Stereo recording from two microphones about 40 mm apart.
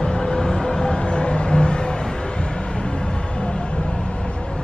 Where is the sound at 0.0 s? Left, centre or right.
Centre.